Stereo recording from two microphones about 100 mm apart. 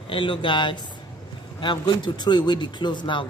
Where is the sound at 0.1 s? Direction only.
60° left (ahead or behind).